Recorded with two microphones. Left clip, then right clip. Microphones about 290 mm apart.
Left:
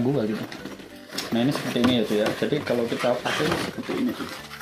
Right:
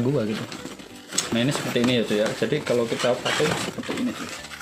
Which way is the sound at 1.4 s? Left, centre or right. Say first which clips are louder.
Left 1 dB; right.